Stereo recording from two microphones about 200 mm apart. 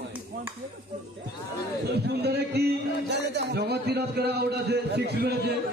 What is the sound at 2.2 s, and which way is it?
A man's voice, 55° right (ahead or behind).